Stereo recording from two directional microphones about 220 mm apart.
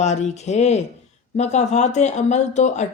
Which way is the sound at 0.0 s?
30° left (ahead or behind).